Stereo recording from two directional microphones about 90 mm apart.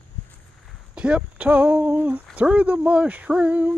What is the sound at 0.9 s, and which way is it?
Speech, 10° right (ahead or behind).